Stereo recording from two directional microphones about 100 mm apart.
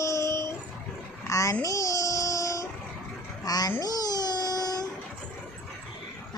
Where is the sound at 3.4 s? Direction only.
40° left (ahead or behind).